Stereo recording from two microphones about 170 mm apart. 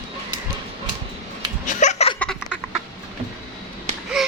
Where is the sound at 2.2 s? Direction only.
5° left (ahead or behind).